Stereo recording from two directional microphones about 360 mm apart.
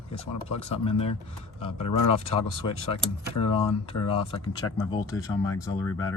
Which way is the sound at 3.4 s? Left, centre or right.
Centre.